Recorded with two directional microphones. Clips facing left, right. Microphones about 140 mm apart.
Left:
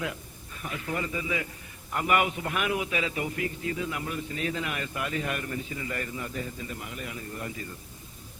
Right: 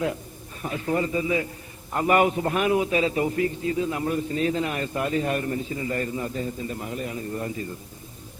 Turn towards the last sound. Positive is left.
turn(degrees=-30)  # may be behind; listen again after turning